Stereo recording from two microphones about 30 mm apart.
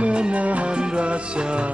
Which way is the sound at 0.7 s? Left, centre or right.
Right.